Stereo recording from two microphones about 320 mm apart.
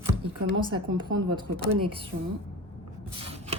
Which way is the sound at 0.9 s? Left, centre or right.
Centre.